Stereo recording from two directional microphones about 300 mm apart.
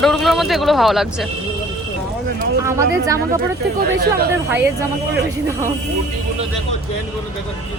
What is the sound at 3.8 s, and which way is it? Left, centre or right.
Speech, right.